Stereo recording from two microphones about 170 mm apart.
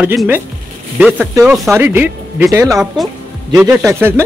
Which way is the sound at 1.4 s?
Centre (ahead or behind).